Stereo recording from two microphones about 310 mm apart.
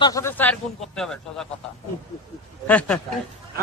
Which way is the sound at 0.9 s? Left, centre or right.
Centre.